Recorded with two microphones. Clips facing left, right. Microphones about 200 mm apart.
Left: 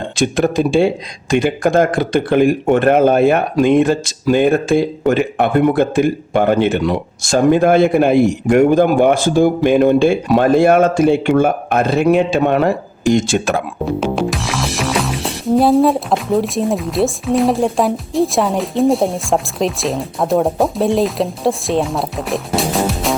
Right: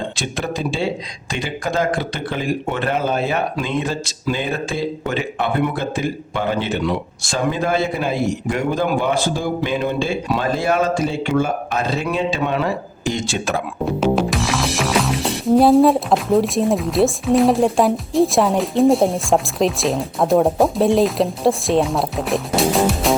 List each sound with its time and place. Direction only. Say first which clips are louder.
0.2 s speech: left 13 dB; 50° left (ahead or behind)
14.0 s music: right 4 dB; centre (ahead or behind)